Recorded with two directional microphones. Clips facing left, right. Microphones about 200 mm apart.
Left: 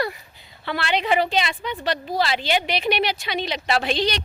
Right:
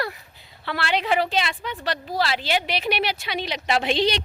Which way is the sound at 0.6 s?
Centre (ahead or behind).